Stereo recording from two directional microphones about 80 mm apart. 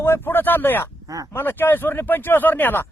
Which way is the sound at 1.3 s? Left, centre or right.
Left.